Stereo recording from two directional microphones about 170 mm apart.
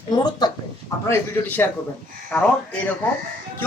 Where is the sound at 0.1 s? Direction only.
25° left (ahead or behind).